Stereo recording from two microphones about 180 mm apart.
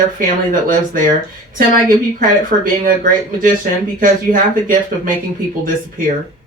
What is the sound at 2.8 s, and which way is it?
Speech, 50° right (ahead or behind).